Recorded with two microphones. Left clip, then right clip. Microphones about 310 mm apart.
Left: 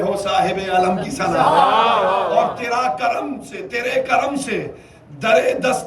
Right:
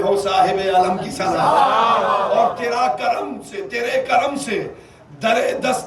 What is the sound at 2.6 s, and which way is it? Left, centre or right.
A man's voice, centre.